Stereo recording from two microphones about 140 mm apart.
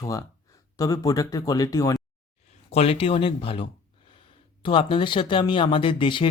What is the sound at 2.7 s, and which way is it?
Speech, 45° left (ahead or behind).